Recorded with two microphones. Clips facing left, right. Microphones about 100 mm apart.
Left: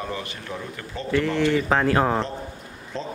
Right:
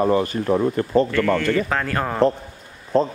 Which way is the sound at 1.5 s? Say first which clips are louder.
Left 2 dB; 15° left (ahead or behind).